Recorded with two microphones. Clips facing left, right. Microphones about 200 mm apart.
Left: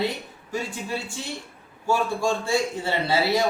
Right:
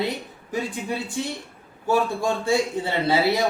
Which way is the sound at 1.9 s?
60° right (ahead or behind).